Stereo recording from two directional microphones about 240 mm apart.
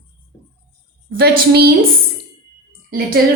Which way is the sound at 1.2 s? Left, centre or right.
Right.